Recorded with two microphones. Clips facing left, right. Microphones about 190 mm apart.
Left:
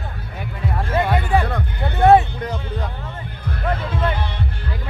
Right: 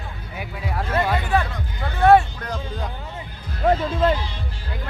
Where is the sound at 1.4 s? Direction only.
60° left (ahead or behind).